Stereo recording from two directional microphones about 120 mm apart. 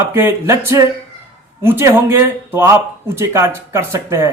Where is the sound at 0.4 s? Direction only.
25° right (ahead or behind).